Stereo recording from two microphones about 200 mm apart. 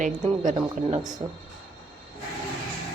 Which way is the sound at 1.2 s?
15° right (ahead or behind).